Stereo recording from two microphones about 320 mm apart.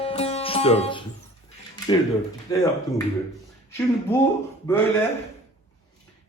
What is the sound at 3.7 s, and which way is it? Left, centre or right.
Speech, centre.